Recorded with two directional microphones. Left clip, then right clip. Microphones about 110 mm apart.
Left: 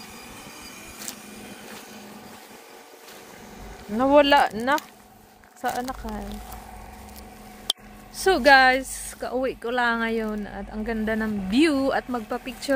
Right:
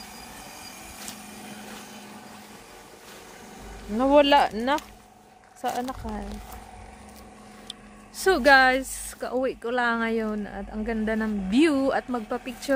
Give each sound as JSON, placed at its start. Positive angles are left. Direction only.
{"t": 3.9, "sound": "speech", "side_deg": -5}
{"t": 4.3, "sound": "speech", "side_deg": -25}
{"t": 8.2, "sound": "speech", "side_deg": -10}